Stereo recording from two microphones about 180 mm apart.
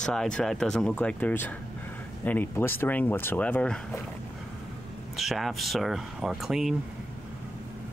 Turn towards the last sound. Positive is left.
turn(degrees=0)  # may be behind; listen again after turning